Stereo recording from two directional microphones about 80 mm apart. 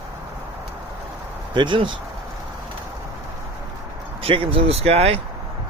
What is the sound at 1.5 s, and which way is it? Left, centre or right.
Speech, right.